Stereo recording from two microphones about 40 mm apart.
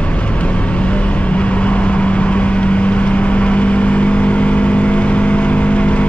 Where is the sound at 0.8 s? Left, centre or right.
Left.